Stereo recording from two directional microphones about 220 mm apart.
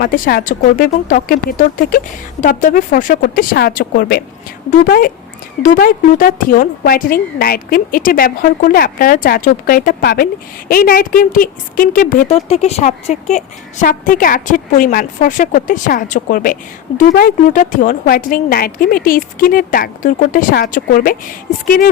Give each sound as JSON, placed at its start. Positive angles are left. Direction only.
{"t": 0.0, "sound": "a woman's voice", "side_deg": 40}
{"t": 12.3, "sound": "a woman's voice", "side_deg": 30}